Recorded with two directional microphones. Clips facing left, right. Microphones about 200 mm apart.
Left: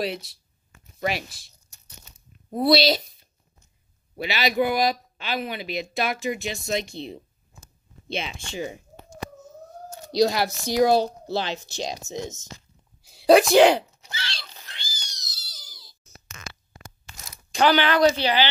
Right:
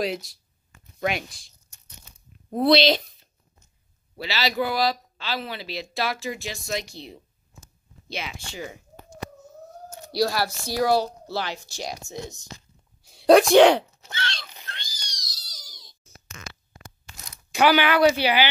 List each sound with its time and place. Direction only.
0.0 s speech: centre (ahead or behind)
2.5 s speech: 5° left (ahead or behind)
4.2 s speech: 20° left (ahead or behind)
10.1 s speech: 20° left (ahead or behind)
13.0 s a sound: centre (ahead or behind)
17.5 s speech: 10° right (ahead or behind)